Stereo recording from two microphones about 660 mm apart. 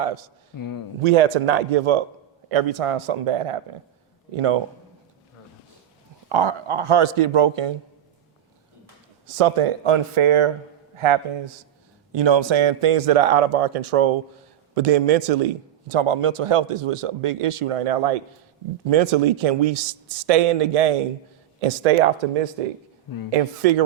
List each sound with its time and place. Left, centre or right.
0.5 s a man's voice: left
1.0 s a man's voice: right
6.2 s a man's voice: right
9.2 s a man's voice: right
23.3 s speech: right